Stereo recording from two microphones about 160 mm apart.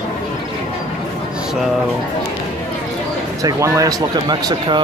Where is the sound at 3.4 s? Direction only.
20° right (ahead or behind).